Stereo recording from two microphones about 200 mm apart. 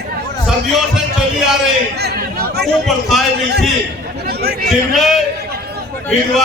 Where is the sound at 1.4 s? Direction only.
Centre (ahead or behind).